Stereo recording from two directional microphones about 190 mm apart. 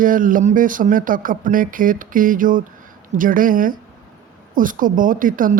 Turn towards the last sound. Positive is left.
turn(degrees=-45)  # may be behind; listen again after turning